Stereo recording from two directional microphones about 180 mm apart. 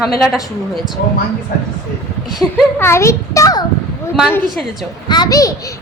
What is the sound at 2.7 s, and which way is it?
Speech, 15° left (ahead or behind).